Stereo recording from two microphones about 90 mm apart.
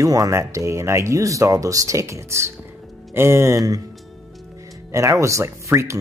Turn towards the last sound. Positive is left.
turn(degrees=-30)  # may be behind; listen again after turning